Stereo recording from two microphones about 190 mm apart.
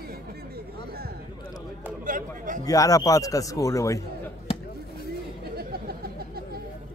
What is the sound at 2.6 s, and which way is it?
A man's voice, 20° left (ahead or behind).